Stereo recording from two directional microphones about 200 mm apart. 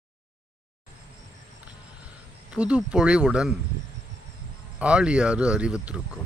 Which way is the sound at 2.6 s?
5° right (ahead or behind).